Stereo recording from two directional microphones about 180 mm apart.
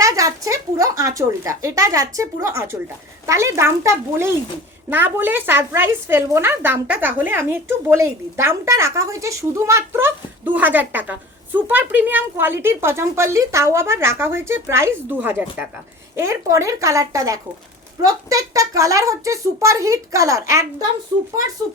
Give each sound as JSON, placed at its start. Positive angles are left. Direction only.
{"t": 0.0, "sound": "a woman's voice", "side_deg": -15}